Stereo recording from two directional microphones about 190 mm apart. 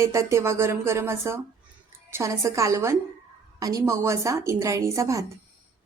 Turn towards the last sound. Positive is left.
turn(degrees=-15)  # may be behind; listen again after turning